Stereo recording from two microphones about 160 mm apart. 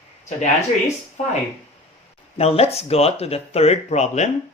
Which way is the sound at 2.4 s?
40° left (ahead or behind).